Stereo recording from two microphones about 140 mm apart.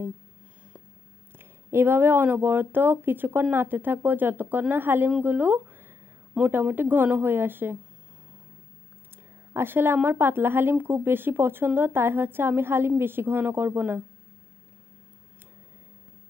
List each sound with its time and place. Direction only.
1.4 s a woman's voice: 15° right (ahead or behind)
9.5 s a woman's voice: 15° right (ahead or behind)